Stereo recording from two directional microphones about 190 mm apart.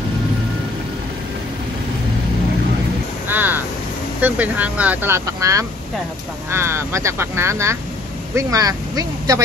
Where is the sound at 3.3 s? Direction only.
10° right (ahead or behind).